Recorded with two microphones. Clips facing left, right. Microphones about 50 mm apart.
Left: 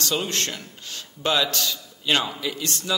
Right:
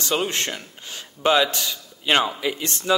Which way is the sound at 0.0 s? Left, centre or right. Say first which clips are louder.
Right 2 dB; right.